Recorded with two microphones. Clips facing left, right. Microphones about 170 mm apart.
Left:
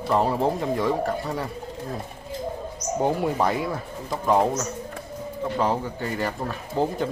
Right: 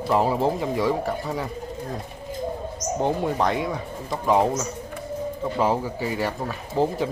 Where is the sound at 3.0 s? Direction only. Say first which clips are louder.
Even; 5° left (ahead or behind).